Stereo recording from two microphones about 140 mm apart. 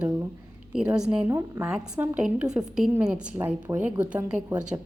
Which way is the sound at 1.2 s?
20° right (ahead or behind).